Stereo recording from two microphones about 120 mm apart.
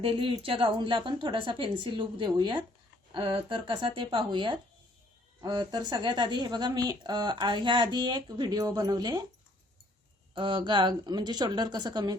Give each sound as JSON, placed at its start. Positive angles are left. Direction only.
{"t": 0.0, "sound": "a woman's voice", "side_deg": -45}
{"t": 10.3, "sound": "a woman's voice", "side_deg": -45}